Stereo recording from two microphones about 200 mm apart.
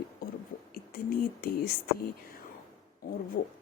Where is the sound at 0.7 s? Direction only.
45° left (ahead or behind).